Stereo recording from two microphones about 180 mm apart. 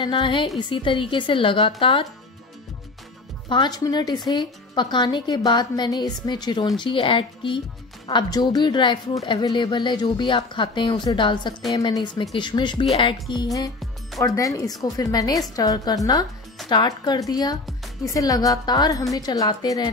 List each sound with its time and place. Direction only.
0.0 s a woman's voice: 25° left (ahead or behind)
3.4 s a woman's voice: 25° left (ahead or behind)